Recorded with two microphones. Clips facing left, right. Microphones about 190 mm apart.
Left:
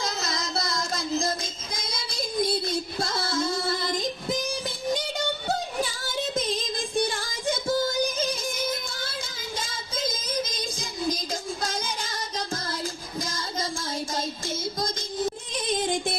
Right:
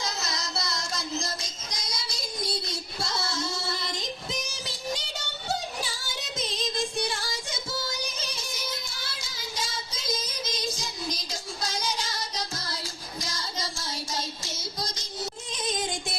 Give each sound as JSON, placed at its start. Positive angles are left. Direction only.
{"t": 0.0, "sound": "music", "side_deg": 55}
{"t": 6.3, "sound": "music", "side_deg": 55}
{"t": 9.6, "sound": "child singing", "side_deg": 55}
{"t": 15.5, "sound": "music", "side_deg": 55}